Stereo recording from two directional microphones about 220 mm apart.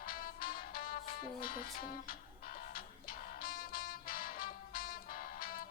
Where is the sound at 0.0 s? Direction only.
40° left (ahead or behind).